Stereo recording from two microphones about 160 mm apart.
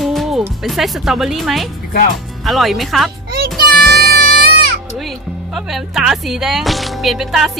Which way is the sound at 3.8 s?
75° right (ahead or behind).